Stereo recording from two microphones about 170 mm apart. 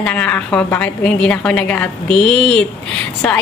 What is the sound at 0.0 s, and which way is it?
A woman's voice, 5° left (ahead or behind).